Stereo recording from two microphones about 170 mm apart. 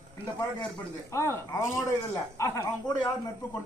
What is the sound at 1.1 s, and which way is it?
Speech, 15° left (ahead or behind).